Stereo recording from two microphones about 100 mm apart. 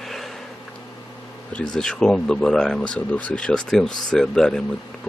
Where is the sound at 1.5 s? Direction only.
5° left (ahead or behind).